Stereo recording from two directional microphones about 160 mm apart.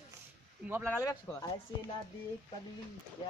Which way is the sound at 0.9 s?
20° left (ahead or behind).